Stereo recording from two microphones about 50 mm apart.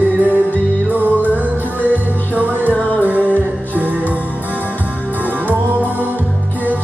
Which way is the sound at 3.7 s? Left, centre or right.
Right.